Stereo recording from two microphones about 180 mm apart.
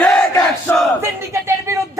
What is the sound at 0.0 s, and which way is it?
Crowd, 5° left (ahead or behind).